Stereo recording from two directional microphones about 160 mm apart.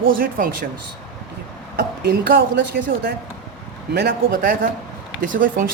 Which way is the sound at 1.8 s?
75° right (ahead or behind).